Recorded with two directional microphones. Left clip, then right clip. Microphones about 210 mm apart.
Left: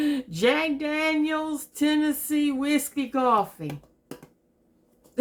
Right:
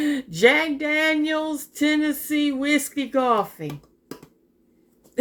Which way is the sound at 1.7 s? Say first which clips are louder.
Right 2 dB; centre (ahead or behind).